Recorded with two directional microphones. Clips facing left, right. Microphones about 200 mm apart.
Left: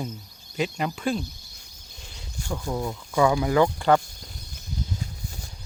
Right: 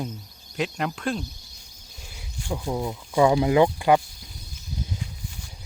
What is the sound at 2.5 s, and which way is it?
Speech, 15° right (ahead or behind).